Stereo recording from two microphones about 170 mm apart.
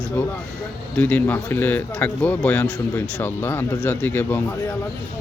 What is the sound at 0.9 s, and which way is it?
Speech, 10° left (ahead or behind).